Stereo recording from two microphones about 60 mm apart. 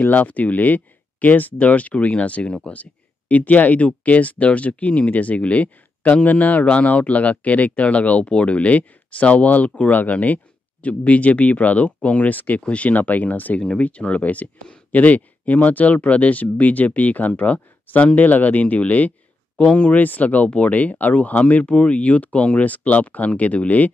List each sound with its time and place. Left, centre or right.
0.0 s speech: left
19.6 s speech: centre
19.9 s speech: left